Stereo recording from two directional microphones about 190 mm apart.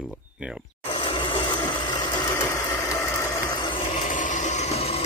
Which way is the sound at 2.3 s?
15° left (ahead or behind).